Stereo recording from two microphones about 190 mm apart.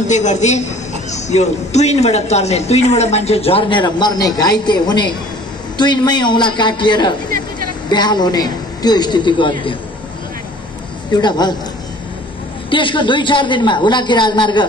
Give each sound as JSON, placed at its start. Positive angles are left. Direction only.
{"t": 0.0, "sound": "a man's voice", "side_deg": 40}
{"t": 11.1, "sound": "a man's voice", "side_deg": 20}
{"t": 12.6, "sound": "a man's voice", "side_deg": 25}